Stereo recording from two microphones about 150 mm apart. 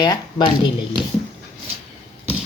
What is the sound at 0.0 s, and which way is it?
Speech, 30° left (ahead or behind).